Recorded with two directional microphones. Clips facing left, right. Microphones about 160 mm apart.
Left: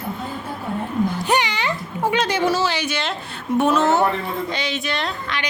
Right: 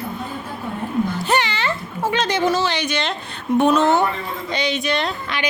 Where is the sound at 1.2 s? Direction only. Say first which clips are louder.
Even; 15° left (ahead or behind).